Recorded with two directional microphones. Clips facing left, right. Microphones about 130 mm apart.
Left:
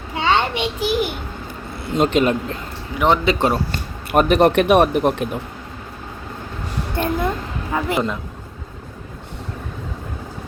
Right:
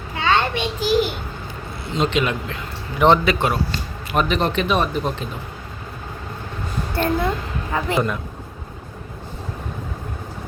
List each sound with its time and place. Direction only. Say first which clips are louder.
0.2 s a sound: left 1 dB; 20° left (ahead or behind)
1.9 s a man's voice: left 4 dB; 50° left (ahead or behind)
3.7 s speech: left 3 dB; 50° left (ahead or behind)
6.9 s speech: even; 15° left (ahead or behind)